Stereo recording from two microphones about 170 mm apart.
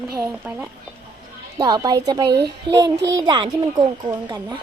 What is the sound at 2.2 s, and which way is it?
Speech, 75° right (ahead or behind).